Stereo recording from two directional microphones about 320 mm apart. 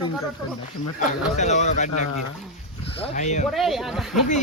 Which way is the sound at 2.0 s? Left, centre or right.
Left.